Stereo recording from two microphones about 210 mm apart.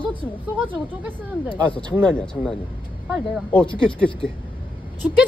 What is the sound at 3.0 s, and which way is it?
Speech, centre (ahead or behind).